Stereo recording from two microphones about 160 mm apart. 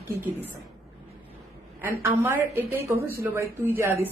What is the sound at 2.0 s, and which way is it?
A woman's voice, 15° right (ahead or behind).